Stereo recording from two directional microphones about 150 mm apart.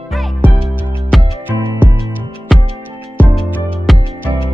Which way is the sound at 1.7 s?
20° right (ahead or behind).